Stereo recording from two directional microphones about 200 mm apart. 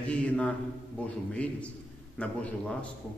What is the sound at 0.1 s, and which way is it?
Mantra, 5° left (ahead or behind).